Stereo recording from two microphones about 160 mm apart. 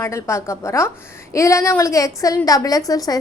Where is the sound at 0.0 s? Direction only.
15° left (ahead or behind).